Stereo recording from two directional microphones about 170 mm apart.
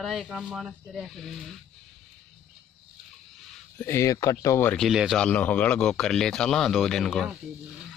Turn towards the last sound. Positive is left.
turn(degrees=5)  # may be behind; listen again after turning